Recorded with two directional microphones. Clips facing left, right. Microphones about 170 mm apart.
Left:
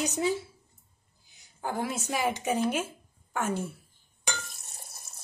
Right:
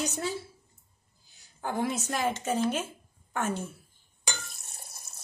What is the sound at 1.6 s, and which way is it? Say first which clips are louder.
A woman's voice: right 2 dB; centre (ahead or behind).